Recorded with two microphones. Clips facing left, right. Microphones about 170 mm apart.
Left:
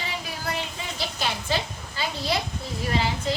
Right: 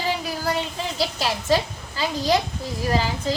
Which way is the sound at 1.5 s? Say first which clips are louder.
Right 7 dB; 40° right (ahead or behind).